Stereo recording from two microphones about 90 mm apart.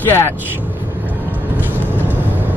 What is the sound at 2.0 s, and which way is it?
Vehicle, 20° right (ahead or behind).